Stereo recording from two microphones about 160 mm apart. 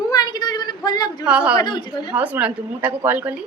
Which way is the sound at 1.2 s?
5° right (ahead or behind).